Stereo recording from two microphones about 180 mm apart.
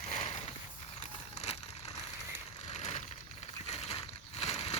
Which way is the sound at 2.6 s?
40° left (ahead or behind).